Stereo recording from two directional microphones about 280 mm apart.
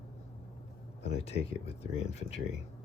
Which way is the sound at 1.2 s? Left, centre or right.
Left.